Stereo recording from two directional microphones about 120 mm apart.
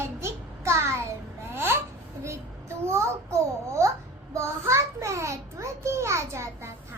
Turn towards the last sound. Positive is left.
turn(degrees=-25)  # may be behind; listen again after turning